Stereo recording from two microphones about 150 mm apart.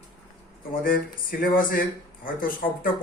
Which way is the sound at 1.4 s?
70° left (ahead or behind).